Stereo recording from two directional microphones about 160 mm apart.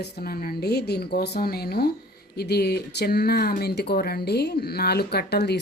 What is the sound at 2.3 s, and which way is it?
Speech, 90° left.